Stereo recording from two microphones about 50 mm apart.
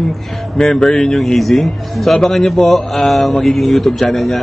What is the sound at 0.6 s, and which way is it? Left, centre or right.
A man's voice, centre.